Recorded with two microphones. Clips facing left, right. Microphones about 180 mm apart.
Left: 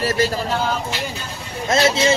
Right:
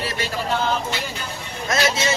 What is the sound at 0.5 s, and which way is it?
Speech, 10° left (ahead or behind).